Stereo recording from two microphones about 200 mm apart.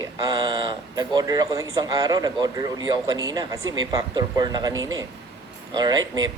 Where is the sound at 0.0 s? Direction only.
20° right (ahead or behind).